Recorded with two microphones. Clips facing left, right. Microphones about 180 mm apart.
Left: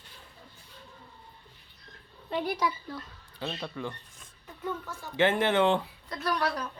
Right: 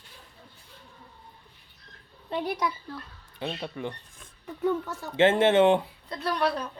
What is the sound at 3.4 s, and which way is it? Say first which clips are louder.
Speech: right 2 dB; 20° right (ahead or behind).